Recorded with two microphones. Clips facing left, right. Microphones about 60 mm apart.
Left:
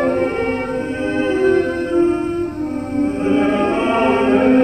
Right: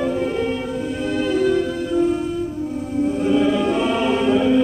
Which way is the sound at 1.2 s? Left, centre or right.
Left.